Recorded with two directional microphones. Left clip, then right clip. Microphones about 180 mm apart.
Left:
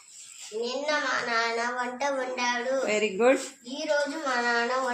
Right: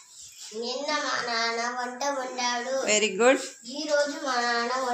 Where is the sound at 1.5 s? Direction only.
20° left (ahead or behind).